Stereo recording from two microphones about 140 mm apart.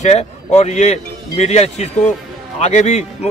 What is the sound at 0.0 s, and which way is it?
A man's voice, 50° left (ahead or behind).